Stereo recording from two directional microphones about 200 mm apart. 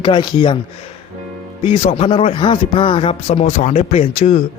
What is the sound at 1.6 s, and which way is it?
A man's voice, 30° left (ahead or behind).